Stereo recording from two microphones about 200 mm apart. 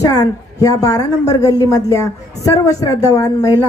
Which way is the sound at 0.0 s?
20° left (ahead or behind).